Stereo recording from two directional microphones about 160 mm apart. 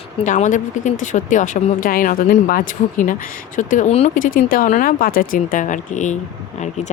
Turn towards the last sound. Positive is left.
turn(degrees=50)  # may be behind; listen again after turning